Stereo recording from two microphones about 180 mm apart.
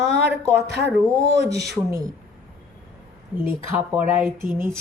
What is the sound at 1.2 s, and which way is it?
Speech, 20° right (ahead or behind).